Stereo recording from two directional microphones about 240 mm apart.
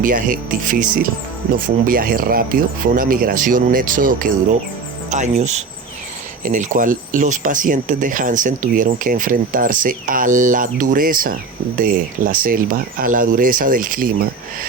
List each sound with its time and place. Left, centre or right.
0.0 s speech: right